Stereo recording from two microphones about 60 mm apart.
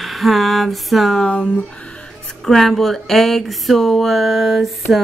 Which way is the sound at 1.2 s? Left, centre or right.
Centre.